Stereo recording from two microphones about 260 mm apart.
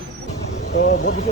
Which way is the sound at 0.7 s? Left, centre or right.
Left.